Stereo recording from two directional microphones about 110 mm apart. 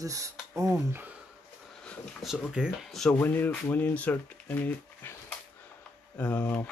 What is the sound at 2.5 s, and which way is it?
Speech, 5° right (ahead or behind).